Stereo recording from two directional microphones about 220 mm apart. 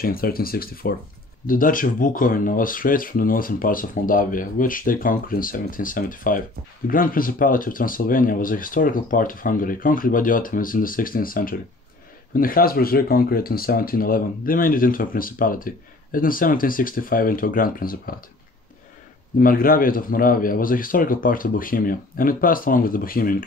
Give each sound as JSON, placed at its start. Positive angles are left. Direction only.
{"t": 0.0, "sound": "speech", "side_deg": 40}
{"t": 19.4, "sound": "speech", "side_deg": 40}